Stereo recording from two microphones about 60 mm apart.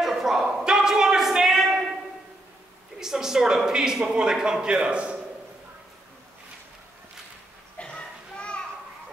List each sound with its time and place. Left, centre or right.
0.0 s a sound: centre
3.0 s a man's voice: centre
7.8 s children playing: centre